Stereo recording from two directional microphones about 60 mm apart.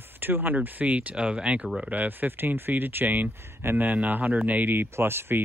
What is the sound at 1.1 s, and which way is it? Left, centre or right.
Speech, centre.